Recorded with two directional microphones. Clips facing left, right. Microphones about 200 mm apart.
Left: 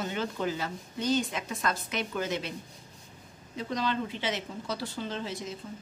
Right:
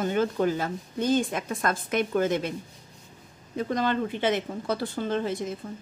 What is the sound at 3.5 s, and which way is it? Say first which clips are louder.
Speech: right 5 dB; 50° right (ahead or behind).